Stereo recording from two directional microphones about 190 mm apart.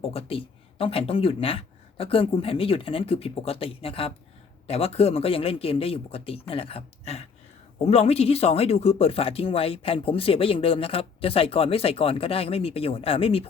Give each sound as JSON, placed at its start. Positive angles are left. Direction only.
{"t": 0.0, "sound": "speech", "side_deg": 30}